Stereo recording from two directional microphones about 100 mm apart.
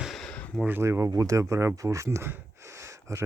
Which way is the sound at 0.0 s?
5° left (ahead or behind).